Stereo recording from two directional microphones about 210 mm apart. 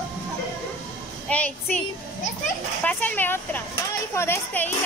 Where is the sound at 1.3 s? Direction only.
5° left (ahead or behind).